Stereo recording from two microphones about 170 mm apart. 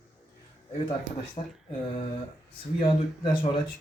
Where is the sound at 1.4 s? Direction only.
40° left (ahead or behind).